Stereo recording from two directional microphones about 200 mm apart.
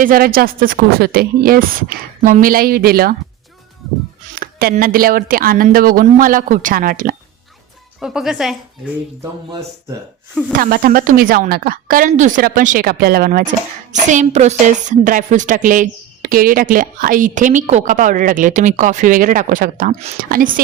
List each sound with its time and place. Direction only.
0.0 s speech: 45° right (ahead or behind)
4.4 s speech: 50° right (ahead or behind)
7.9 s speech: centre (ahead or behind)
10.5 s a woman's voice: 45° right (ahead or behind)